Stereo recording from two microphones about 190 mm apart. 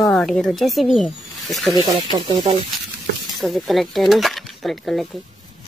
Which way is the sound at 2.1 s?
20° right (ahead or behind).